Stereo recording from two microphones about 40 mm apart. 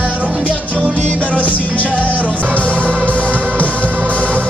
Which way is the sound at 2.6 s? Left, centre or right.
Left.